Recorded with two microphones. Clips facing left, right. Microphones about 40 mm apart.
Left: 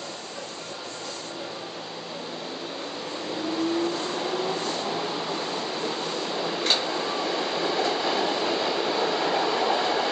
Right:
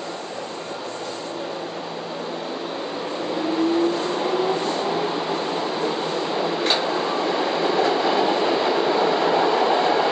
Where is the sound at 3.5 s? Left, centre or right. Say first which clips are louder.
Right 6 dB; centre.